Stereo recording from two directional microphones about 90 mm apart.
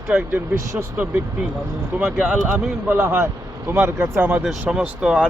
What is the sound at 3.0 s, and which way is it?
Speech, 35° right (ahead or behind).